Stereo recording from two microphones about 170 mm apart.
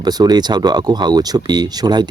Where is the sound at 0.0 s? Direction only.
25° right (ahead or behind).